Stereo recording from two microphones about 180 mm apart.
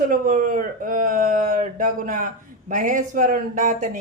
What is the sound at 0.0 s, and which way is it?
Speech, 50° right (ahead or behind).